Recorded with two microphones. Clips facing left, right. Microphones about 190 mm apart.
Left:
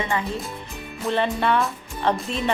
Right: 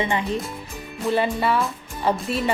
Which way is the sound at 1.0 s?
5° right (ahead or behind).